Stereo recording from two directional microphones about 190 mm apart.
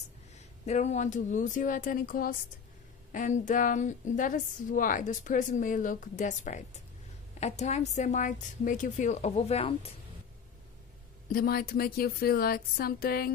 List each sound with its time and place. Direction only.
0.7 s a woman's voice: 35° left (ahead or behind)
11.2 s a woman's voice: 50° left (ahead or behind)